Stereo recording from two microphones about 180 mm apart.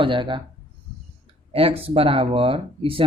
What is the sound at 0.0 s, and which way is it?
Speech, 25° right (ahead or behind).